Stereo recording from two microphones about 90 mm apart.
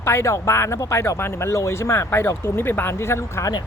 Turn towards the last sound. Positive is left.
turn(degrees=30)  # may be behind; listen again after turning